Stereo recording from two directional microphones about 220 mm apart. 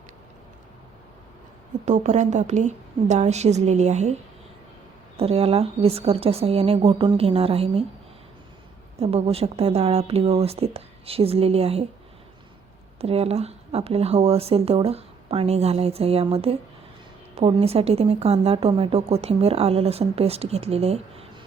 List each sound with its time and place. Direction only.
1.8 s a woman's voice: 30° right (ahead or behind)
9.0 s a woman's voice: 30° right (ahead or behind)
13.0 s a woman's voice: 30° right (ahead or behind)